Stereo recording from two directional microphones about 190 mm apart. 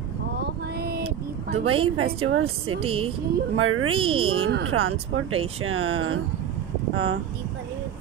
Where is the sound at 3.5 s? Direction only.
90° right.